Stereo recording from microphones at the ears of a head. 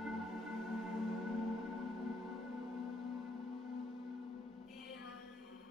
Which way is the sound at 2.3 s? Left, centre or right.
Left.